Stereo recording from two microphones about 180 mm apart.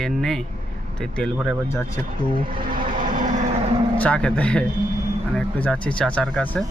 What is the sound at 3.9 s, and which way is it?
Speech, 5° left (ahead or behind).